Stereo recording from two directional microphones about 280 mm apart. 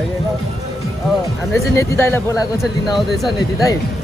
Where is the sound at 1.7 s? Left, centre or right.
Centre.